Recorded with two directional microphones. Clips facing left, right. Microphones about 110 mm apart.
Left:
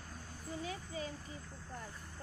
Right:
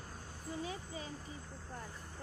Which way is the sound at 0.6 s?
30° right (ahead or behind).